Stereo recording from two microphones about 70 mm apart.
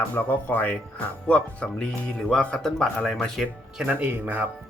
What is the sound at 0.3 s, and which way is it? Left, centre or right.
Speech, left.